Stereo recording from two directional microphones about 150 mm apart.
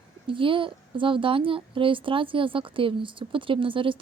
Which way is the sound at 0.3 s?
35° right (ahead or behind).